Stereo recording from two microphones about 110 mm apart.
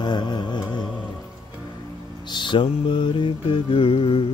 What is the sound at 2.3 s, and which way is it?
Mantra, 45° left (ahead or behind).